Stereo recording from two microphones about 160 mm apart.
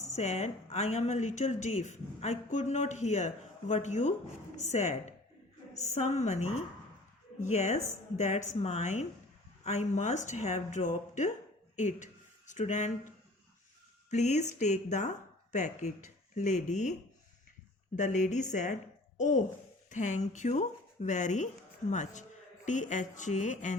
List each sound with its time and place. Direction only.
0.1 s speech: 45° left (ahead or behind)
14.1 s speech: 45° left (ahead or behind)
17.9 s a woman's voice: 50° left (ahead or behind)